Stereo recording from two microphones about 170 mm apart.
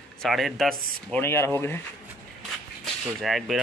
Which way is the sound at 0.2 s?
Centre (ahead or behind).